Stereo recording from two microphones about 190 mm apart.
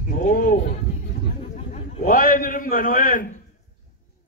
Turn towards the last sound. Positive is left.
turn(degrees=45)  # may be behind; listen again after turning